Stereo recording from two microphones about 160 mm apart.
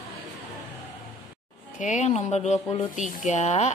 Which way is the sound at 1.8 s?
50° left (ahead or behind).